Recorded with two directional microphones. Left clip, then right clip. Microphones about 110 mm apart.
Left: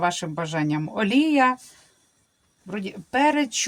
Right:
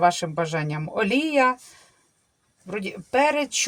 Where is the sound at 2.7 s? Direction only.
30° right (ahead or behind).